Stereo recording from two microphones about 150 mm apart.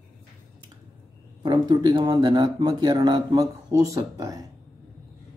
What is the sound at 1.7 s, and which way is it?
Speech, 30° right (ahead or behind).